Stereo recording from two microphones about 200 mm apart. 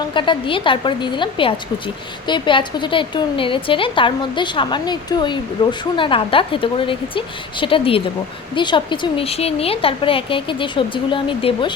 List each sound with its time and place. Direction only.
0.0 s speech: 25° left (ahead or behind)